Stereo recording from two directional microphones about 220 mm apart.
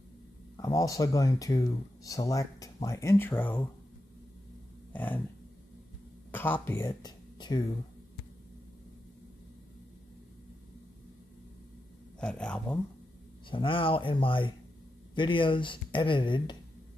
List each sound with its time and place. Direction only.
0.6 s speech: 15° left (ahead or behind)
4.9 s a sound: 10° left (ahead or behind)
6.3 s speech: 10° left (ahead or behind)
12.2 s speech: 5° left (ahead or behind)
13.5 s speech: 25° left (ahead or behind)